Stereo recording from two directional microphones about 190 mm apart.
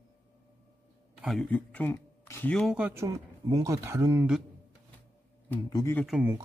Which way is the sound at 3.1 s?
20° right (ahead or behind).